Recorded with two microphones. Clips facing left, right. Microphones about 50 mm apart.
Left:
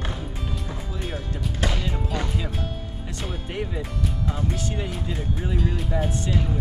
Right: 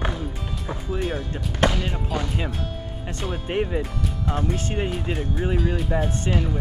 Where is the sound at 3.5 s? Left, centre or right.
Right.